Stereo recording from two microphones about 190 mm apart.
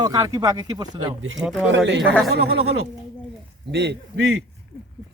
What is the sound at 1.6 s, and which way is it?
Speech, 75° right (ahead or behind).